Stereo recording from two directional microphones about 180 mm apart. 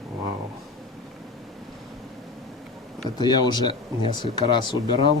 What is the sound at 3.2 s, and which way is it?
Speech, 25° left (ahead or behind).